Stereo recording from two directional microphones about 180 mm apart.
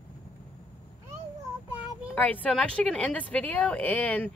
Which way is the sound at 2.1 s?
10° left (ahead or behind).